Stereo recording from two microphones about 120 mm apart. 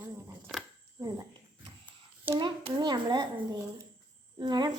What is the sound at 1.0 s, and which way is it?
Speech, 35° right (ahead or behind).